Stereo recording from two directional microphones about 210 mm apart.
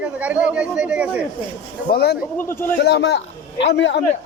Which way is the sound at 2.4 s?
10° left (ahead or behind).